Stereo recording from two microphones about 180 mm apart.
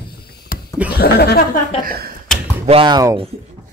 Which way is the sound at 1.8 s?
55° right (ahead or behind).